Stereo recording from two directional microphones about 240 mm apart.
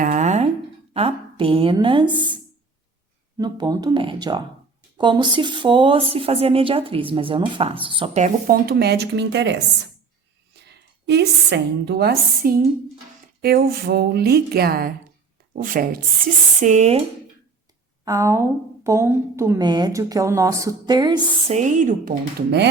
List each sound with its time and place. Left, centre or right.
0.0 s a sound: right
0.9 s speech: right
3.3 s a woman's voice: centre
18.0 s a woman's voice: centre; by 22.7 s right